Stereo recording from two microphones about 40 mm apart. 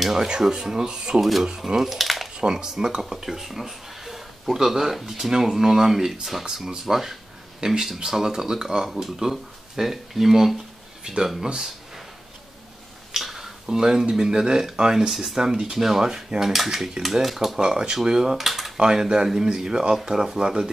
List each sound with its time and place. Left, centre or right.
0.0 s speech: centre
1.8 s speech: centre
2.3 s speech: centre
13.1 s speech: centre
17.6 s speech: centre
18.8 s speech: centre